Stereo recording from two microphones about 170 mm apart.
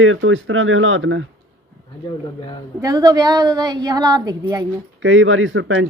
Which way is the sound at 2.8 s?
20° right (ahead or behind).